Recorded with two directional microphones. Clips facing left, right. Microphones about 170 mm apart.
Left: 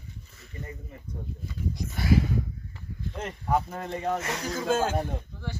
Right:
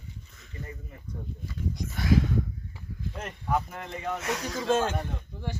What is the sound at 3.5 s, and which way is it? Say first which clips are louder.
Speech: left 2 dB; 30° left (ahead or behind).